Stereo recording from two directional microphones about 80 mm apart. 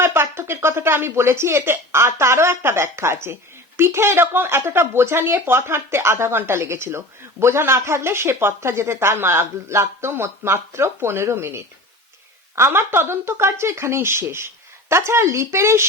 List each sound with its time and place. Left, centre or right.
0.0 s a woman's voice: right